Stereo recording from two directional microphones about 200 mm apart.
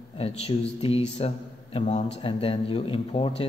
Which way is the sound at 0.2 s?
30° left (ahead or behind).